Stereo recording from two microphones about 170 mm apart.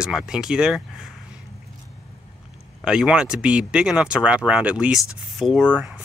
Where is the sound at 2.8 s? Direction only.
5° right (ahead or behind).